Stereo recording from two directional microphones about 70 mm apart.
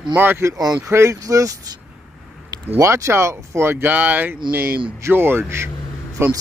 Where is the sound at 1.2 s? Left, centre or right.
Right.